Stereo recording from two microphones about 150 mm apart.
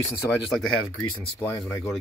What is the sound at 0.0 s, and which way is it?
Speech, 20° left (ahead or behind).